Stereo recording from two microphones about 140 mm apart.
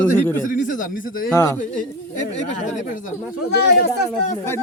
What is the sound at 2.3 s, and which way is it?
Speech, 55° left (ahead or behind).